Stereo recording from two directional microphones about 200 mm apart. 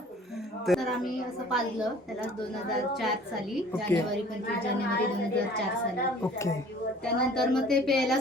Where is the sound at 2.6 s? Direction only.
Centre (ahead or behind).